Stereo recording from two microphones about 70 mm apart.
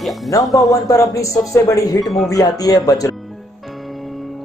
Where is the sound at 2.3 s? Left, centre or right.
Left.